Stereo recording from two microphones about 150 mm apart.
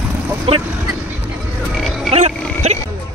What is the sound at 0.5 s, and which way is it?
Speech, 40° right (ahead or behind).